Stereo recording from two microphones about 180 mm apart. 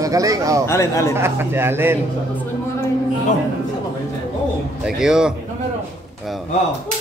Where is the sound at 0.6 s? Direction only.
15° left (ahead or behind).